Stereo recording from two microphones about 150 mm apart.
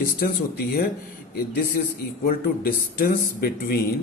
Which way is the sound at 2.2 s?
75° left (ahead or behind).